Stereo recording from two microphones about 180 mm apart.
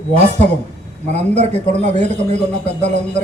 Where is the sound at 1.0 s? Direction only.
40° right (ahead or behind).